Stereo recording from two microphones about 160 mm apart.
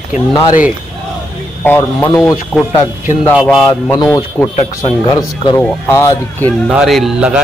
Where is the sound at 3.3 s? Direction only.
5° right (ahead or behind).